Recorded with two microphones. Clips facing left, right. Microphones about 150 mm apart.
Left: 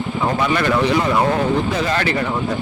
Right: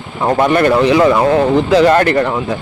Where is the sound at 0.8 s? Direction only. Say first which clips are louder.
Right 7 dB; 90° right.